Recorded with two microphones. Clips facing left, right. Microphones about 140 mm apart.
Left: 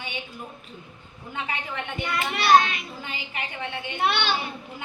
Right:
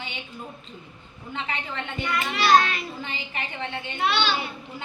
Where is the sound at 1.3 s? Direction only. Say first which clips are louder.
Even; 10° left (ahead or behind).